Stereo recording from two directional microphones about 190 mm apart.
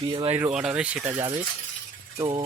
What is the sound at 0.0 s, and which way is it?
Speech, 25° right (ahead or behind).